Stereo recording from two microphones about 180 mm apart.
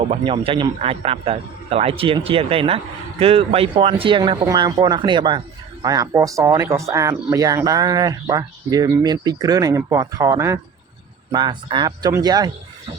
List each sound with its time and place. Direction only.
0.0 s a man's voice: 35° right (ahead or behind)